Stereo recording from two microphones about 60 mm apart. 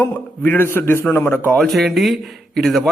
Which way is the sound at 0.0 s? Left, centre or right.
Left.